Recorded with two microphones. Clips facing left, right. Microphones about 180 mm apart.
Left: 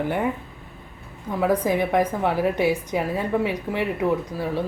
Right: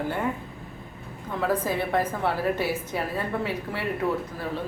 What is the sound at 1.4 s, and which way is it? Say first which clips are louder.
Speech: left 5 dB; 15° left (ahead or behind).